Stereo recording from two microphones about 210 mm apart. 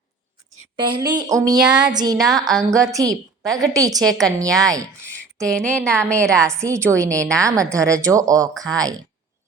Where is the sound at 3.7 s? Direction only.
15° right (ahead or behind).